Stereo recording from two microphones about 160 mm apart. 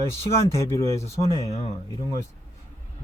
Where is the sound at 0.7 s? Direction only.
20° left (ahead or behind).